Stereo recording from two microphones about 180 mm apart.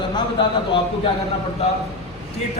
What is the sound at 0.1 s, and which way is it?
A man's voice, 25° left (ahead or behind).